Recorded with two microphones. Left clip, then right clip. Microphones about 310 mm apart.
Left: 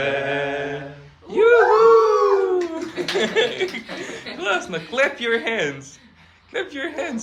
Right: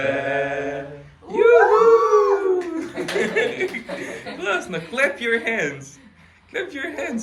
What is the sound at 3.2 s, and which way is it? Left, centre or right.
Chuckle, centre.